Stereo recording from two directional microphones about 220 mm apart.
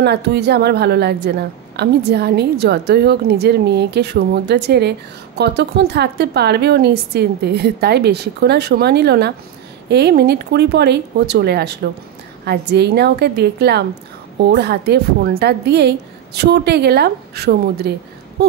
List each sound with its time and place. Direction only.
0.0 s a woman's voice: 50° right (ahead or behind)